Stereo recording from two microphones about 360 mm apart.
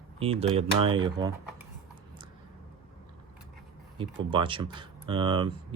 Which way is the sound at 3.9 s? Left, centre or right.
Centre.